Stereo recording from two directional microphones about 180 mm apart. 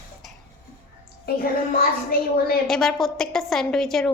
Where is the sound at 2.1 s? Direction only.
60° left (ahead or behind).